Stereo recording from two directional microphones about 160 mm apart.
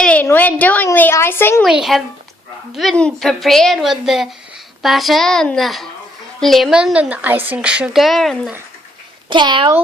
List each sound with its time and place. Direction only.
0.0 s a woman's voice: 10° left (ahead or behind)
1.6 s a woman's voice: centre (ahead or behind)
9.3 s a child's voice: 30° right (ahead or behind)